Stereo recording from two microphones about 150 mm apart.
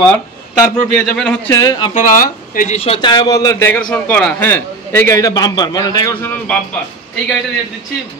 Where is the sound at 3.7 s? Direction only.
10° left (ahead or behind); by 6.3 s 25° left (ahead or behind).